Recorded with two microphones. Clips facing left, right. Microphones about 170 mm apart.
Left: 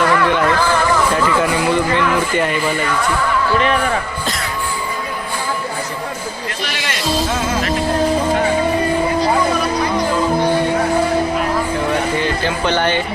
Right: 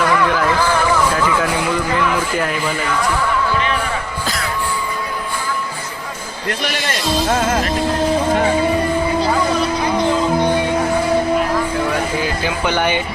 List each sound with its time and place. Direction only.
0.0 s music: centre (ahead or behind)
1.1 s a man's voice: centre (ahead or behind)
7.3 s music: 50° right (ahead or behind)
12.1 s speech: 10° right (ahead or behind)